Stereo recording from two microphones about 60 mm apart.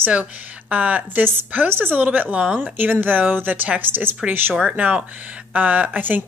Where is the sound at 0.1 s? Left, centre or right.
Right.